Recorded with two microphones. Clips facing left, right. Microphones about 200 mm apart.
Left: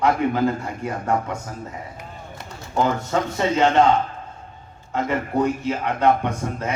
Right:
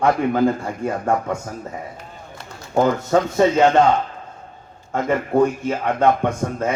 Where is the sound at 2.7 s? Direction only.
45° right (ahead or behind).